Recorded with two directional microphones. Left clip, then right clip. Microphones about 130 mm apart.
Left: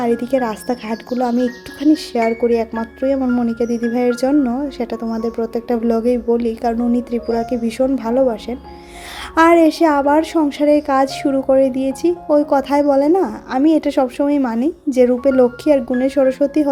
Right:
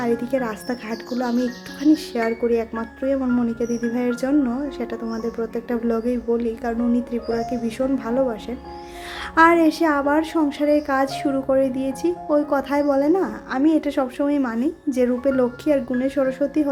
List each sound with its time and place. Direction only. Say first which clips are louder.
0.0 s a woman's voice: left 5 dB; 35° left (ahead or behind)